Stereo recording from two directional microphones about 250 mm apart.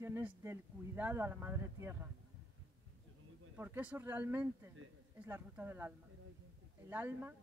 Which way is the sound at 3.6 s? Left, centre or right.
Centre.